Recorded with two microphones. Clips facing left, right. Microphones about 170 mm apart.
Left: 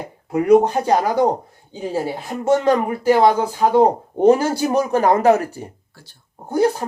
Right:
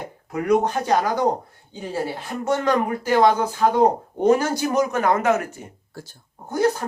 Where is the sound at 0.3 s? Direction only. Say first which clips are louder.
Left 6 dB; 30° left (ahead or behind).